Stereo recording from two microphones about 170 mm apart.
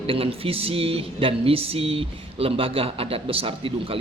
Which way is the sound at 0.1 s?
35° right (ahead or behind).